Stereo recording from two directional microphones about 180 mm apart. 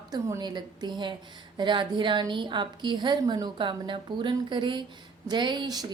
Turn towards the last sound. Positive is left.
turn(degrees=-20)  # may be behind; listen again after turning